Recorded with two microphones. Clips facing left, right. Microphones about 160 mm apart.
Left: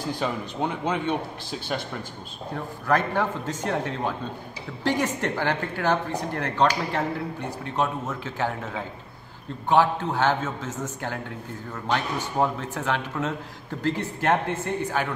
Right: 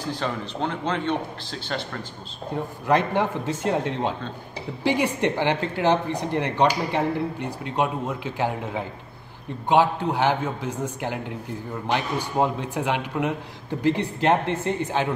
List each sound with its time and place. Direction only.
0.1 s speech: 10° left (ahead or behind)
2.5 s speech: 20° right (ahead or behind)